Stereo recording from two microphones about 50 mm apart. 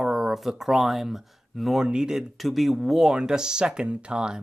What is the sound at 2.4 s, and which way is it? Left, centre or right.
Speech, centre.